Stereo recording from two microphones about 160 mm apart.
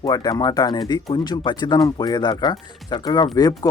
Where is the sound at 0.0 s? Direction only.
25° left (ahead or behind).